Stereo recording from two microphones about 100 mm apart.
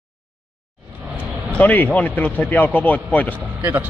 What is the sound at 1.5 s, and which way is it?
A man's voice, 15° left (ahead or behind).